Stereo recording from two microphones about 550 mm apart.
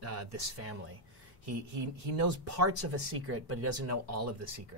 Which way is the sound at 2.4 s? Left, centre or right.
Right.